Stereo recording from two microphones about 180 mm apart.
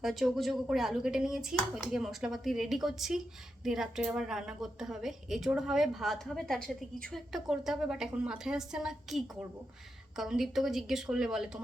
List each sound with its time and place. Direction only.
0.0 s a woman's voice: centre (ahead or behind)